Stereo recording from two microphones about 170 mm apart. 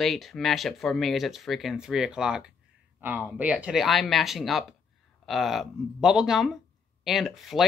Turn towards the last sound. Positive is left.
turn(degrees=0)  # may be behind; listen again after turning